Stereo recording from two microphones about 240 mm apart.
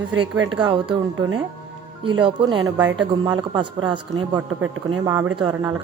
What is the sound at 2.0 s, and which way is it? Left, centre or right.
A man's voice, right.